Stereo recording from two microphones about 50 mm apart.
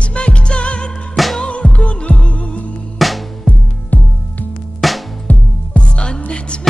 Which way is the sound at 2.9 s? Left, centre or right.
Centre.